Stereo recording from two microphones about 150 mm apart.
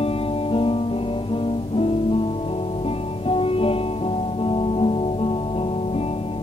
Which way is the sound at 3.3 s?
40° left (ahead or behind).